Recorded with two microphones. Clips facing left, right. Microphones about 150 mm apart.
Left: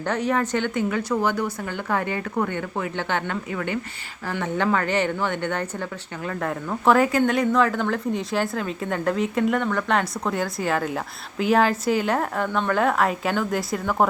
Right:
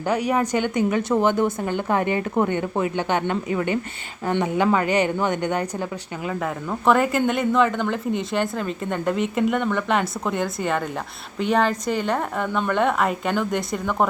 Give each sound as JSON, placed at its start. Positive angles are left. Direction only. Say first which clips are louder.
{"t": 0.0, "sound": "speech", "louder": "right 2 dB", "side_deg": -10}
{"t": 4.4, "sound": "speech", "louder": "right 1 dB", "side_deg": -10}
{"t": 6.2, "sound": "speech", "louder": "even", "side_deg": -5}